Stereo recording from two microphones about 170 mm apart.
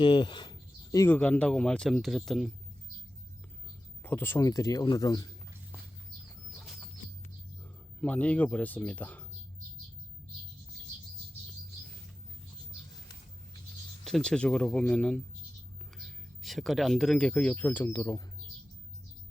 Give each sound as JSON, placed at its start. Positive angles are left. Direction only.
{"t": 0.0, "sound": "a sound", "side_deg": 25}
{"t": 1.1, "sound": "speech", "side_deg": 10}
{"t": 4.0, "sound": "speech", "side_deg": 10}
{"t": 8.0, "sound": "speech", "side_deg": 10}
{"t": 14.0, "sound": "speech", "side_deg": 5}